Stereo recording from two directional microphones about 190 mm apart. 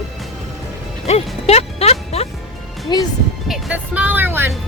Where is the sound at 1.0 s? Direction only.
35° left (ahead or behind).